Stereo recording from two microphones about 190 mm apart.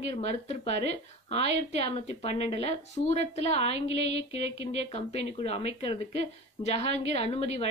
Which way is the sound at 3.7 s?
70° right (ahead or behind).